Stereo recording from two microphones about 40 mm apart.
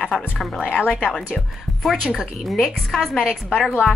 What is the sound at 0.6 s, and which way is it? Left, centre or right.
Speech, left.